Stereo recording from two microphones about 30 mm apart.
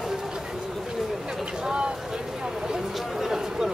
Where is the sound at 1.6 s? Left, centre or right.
Right.